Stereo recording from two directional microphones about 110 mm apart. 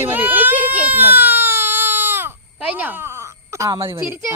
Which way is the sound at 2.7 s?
15° right (ahead or behind).